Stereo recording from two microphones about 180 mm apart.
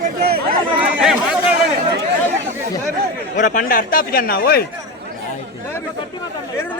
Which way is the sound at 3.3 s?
45° left (ahead or behind).